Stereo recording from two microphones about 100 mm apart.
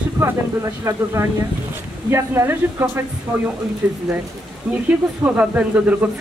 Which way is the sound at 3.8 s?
15° right (ahead or behind).